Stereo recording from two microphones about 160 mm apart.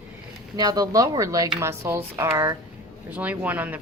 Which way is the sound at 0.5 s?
25° right (ahead or behind).